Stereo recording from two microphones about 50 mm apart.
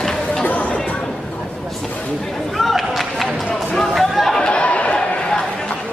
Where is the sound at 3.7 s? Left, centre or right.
Centre.